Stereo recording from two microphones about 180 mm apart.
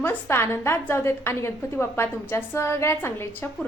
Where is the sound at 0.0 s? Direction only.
15° left (ahead or behind).